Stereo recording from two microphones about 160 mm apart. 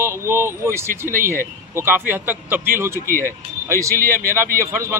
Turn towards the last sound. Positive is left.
turn(degrees=-15)  # may be behind; listen again after turning